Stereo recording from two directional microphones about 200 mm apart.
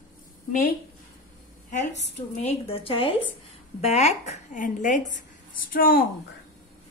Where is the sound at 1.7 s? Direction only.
35° left (ahead or behind).